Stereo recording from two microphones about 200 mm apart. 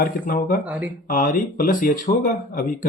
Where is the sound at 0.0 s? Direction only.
45° left (ahead or behind).